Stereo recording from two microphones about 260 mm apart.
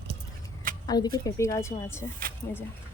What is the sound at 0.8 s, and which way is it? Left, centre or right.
Speech, centre.